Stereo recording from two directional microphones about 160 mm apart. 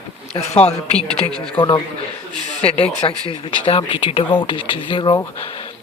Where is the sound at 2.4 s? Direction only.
45° left (ahead or behind).